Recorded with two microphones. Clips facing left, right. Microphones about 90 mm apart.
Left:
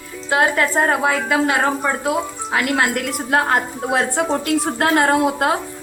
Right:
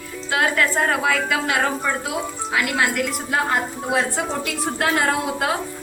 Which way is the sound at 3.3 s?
55° left (ahead or behind).